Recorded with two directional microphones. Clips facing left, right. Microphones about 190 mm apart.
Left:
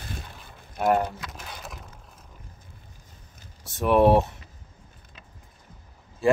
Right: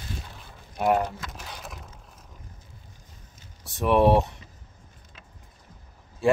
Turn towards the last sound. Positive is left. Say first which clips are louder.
# even
turn(degrees=0)  # may be behind; listen again after turning